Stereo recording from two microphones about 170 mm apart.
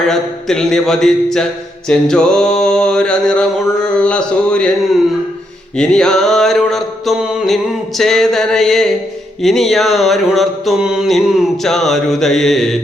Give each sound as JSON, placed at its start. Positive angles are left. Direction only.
{"t": 0.1, "sound": "mantra", "side_deg": 5}
{"t": 5.7, "sound": "mantra", "side_deg": 5}